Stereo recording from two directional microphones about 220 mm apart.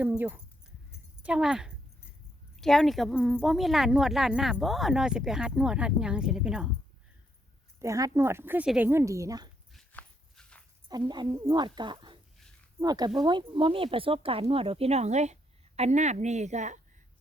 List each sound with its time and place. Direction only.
0.0 s speech: 5° right (ahead or behind)
7.8 s speech: 15° right (ahead or behind)
9.7 s dog: 5° left (ahead or behind)
10.8 s speech: 20° right (ahead or behind)